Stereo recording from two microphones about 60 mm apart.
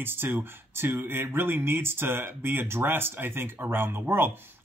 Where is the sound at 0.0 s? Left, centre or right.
Right.